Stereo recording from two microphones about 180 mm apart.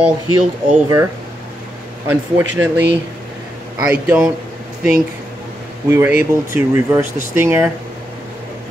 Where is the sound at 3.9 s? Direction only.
5° right (ahead or behind).